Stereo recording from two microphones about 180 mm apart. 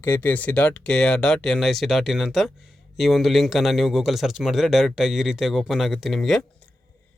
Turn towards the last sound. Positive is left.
turn(degrees=0)  # may be behind; listen again after turning